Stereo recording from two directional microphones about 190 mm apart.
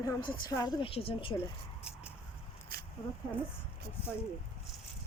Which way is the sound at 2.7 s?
55° right (ahead or behind).